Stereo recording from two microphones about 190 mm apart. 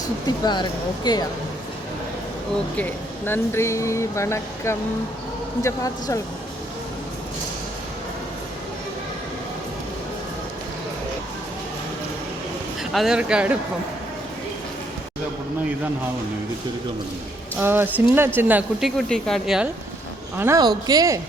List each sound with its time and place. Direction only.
0.4 s speech: 20° left (ahead or behind)
2.7 s speech: 10° left (ahead or behind)
12.8 s a woman's voice: centre (ahead or behind)
17.6 s a woman's voice: 10° right (ahead or behind)
20.3 s speech: 15° right (ahead or behind)